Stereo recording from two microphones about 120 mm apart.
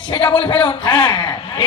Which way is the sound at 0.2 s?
10° left (ahead or behind).